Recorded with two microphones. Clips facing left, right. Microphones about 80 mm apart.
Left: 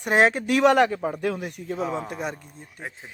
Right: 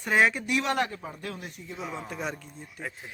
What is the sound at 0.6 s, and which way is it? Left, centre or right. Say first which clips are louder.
A man's voice: left 13 dB; left.